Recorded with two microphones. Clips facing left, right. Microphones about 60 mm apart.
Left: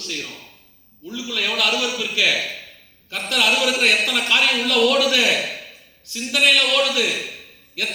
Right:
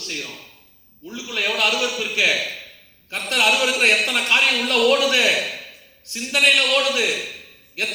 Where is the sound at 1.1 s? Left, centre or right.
Right.